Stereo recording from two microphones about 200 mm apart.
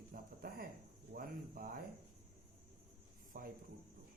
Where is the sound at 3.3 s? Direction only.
45° right (ahead or behind).